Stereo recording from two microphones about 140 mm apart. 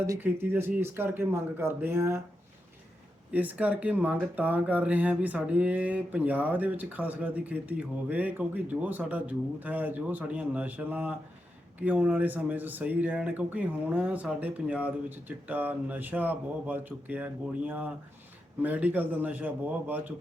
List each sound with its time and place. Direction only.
0.2 s speech: 15° right (ahead or behind)
3.3 s speech: 10° right (ahead or behind)